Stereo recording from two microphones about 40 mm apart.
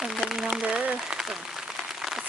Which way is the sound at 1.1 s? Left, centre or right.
Centre.